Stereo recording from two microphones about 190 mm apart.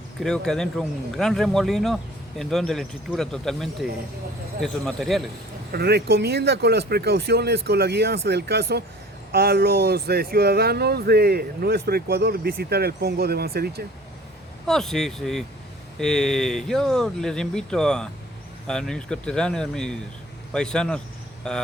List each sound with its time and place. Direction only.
0.2 s speech: 5° left (ahead or behind)
5.7 s speech: 60° right (ahead or behind)
14.7 s speech: centre (ahead or behind)